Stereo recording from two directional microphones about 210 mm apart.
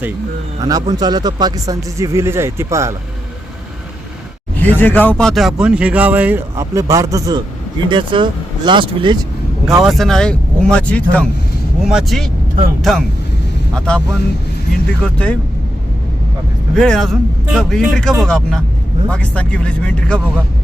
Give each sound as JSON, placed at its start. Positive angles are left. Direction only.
{"t": 0.9, "sound": "speech", "side_deg": -20}
{"t": 4.6, "sound": "speech", "side_deg": 10}
{"t": 9.8, "sound": "speech", "side_deg": 0}
{"t": 16.7, "sound": "speech", "side_deg": 0}